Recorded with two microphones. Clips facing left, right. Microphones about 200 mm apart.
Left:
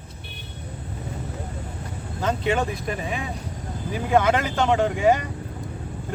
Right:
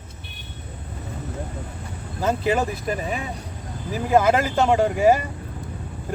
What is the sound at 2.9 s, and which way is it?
Speech, 40° right (ahead or behind).